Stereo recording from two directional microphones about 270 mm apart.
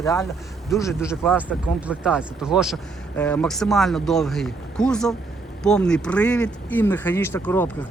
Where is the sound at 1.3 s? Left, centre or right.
Centre.